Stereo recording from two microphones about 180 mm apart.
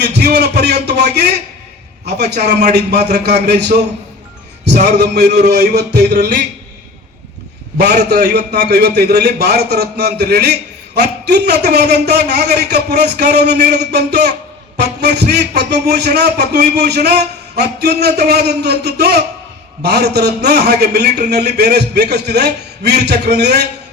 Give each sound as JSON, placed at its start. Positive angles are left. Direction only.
{"t": 0.0, "sound": "a man's voice", "side_deg": -70}
{"t": 4.9, "sound": "a man's voice", "side_deg": -65}
{"t": 8.1, "sound": "a man's voice", "side_deg": -65}